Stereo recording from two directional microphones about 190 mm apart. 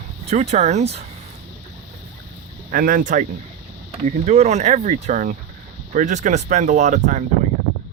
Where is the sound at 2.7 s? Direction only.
45° right (ahead or behind).